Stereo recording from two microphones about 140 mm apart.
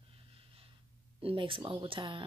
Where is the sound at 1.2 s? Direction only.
40° right (ahead or behind).